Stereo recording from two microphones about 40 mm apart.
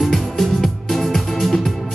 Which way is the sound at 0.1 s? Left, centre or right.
Centre.